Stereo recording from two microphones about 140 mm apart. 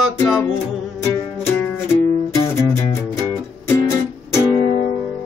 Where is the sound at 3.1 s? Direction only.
20° left (ahead or behind).